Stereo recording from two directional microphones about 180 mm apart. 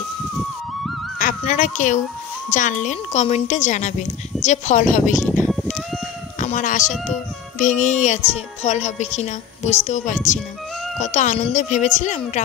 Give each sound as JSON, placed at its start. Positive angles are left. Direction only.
{"t": 1.2, "sound": "a sound", "side_deg": 40}
{"t": 2.5, "sound": "a woman's voice", "side_deg": 45}
{"t": 5.5, "sound": "music", "side_deg": 0}
{"t": 6.4, "sound": "a woman's voice", "side_deg": 45}